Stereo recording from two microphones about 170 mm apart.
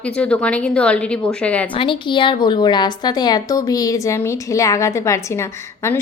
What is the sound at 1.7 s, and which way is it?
A woman's voice, 30° left (ahead or behind).